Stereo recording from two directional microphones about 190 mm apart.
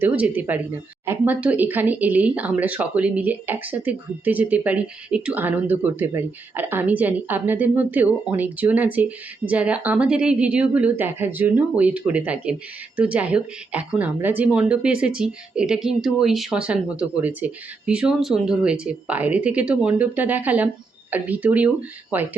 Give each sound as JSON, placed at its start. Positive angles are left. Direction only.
{"t": 0.0, "sound": "speech", "side_deg": -10}